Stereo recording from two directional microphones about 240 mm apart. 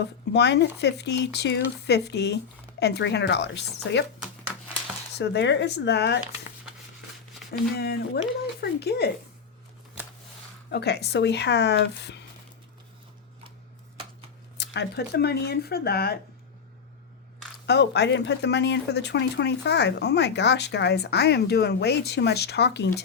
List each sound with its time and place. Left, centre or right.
0.0 s speech: left
5.1 s speech: left
7.8 s speech: left
10.7 s speech: left
14.6 s speech: left
17.7 s speech: left